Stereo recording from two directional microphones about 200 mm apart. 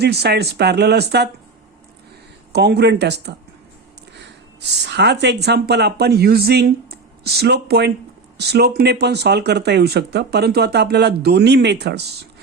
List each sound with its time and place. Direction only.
0.0 s speech: 55° right (ahead or behind)
2.5 s speech: 55° right (ahead or behind)